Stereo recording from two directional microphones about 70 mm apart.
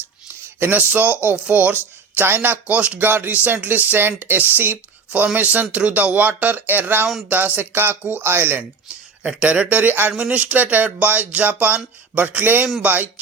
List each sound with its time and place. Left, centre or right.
0.6 s speech: right
9.2 s speech: centre
10.1 s speech: centre
10.3 s speech: right